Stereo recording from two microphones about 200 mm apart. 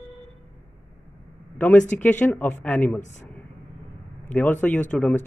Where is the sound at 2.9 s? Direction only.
35° left (ahead or behind).